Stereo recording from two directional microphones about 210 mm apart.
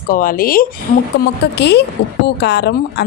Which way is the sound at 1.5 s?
55° left (ahead or behind).